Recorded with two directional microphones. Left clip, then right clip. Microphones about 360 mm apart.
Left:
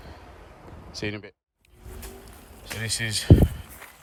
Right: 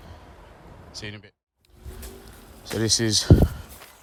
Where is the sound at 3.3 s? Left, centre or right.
Left.